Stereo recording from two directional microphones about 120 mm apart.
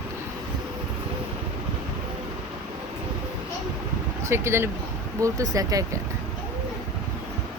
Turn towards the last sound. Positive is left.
turn(degrees=-30)  # may be behind; listen again after turning